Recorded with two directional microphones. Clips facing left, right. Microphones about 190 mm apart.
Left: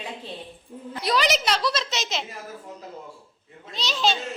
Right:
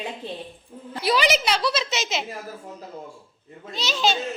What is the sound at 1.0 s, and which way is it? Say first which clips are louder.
A woman's voice: right 2 dB; centre (ahead or behind).